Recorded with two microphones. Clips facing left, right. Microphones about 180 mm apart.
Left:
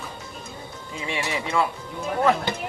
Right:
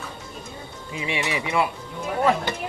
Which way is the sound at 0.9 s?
15° right (ahead or behind).